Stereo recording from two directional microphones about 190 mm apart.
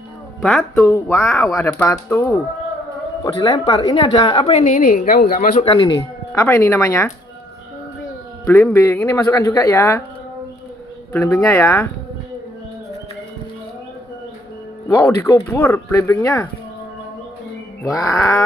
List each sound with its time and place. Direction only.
0.4 s speech: centre (ahead or behind)
0.7 s a woman's voice: 15° left (ahead or behind); by 4.8 s 30° left (ahead or behind)
4.8 s a woman's voice: 45° left (ahead or behind)
5.6 s a woman's voice: 25° left (ahead or behind)
6.4 s speech: 10° left (ahead or behind)
8.5 s speech: 10° left (ahead or behind)
11.1 s speech: 10° left (ahead or behind)
15.0 s speech: 15° left (ahead or behind)
17.8 s speech: 15° left (ahead or behind)